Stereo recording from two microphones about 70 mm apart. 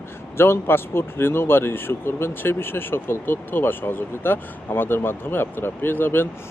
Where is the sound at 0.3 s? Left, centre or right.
Left.